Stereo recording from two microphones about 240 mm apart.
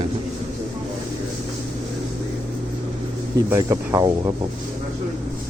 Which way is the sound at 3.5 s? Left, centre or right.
Centre.